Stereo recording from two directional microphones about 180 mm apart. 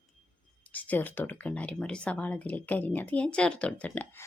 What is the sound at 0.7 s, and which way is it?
Speech, 10° left (ahead or behind).